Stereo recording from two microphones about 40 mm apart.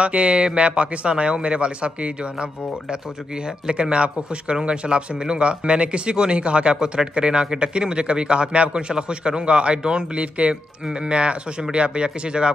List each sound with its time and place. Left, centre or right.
0.0 s a man's voice: right
3.6 s a man's voice: right